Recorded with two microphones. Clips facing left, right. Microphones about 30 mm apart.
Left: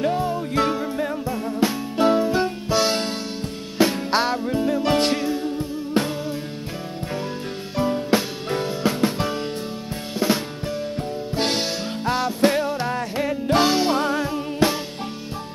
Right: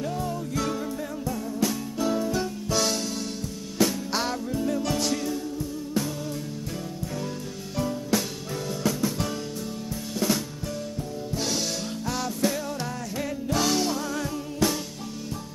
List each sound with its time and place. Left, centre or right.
0.0 s music: left
4.9 s music: left
7.7 s music: left
10.1 s drum: left
11.3 s music: left
13.9 s music: left
14.2 s music: left